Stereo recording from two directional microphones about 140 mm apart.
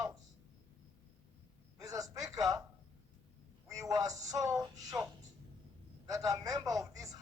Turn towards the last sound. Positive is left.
turn(degrees=-25)  # may be behind; listen again after turning